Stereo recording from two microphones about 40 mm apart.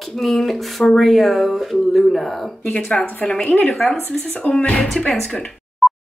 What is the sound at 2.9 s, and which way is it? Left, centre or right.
Speech, centre.